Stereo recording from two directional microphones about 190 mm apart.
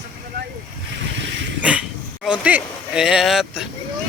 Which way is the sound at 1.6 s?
5° right (ahead or behind).